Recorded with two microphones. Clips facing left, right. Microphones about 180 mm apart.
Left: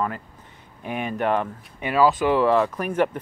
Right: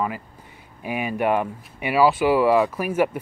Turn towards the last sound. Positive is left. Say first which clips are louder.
# right 1 dB
turn(degrees=-10)  # may be behind; listen again after turning